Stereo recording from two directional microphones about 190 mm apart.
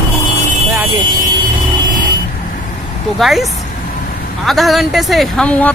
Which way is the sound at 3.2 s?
Centre (ahead or behind).